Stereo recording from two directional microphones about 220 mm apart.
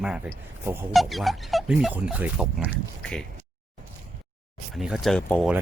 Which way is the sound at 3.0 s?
5° left (ahead or behind).